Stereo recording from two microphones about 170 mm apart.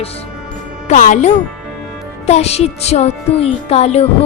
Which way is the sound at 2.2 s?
40° left (ahead or behind).